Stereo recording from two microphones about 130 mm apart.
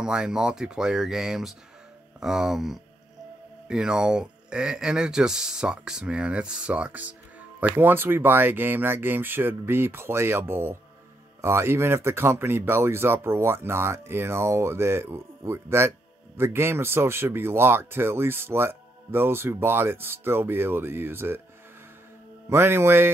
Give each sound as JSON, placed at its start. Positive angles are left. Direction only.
{"t": 0.0, "sound": "speech", "side_deg": -5}
{"t": 22.5, "sound": "speech", "side_deg": -20}